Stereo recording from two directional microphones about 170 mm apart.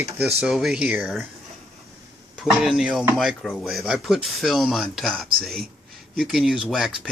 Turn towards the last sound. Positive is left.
turn(degrees=0)  # may be behind; listen again after turning